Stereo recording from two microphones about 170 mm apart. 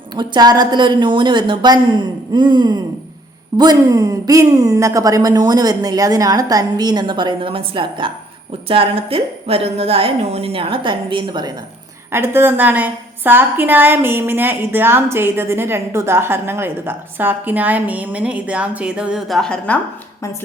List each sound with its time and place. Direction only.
0.2 s a woman's voice: 25° right (ahead or behind)
12.1 s a woman's voice: 15° right (ahead or behind); by 19.8 s 5° left (ahead or behind)